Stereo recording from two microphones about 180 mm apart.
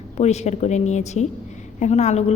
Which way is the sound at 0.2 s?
40° left (ahead or behind).